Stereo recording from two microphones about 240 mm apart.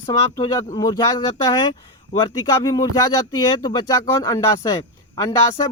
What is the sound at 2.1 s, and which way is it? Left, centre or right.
Speech, centre.